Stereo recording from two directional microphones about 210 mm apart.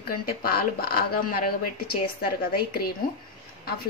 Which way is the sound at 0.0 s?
45° left (ahead or behind).